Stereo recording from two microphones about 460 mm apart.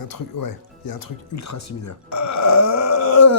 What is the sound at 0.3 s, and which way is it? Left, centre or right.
Speech, left.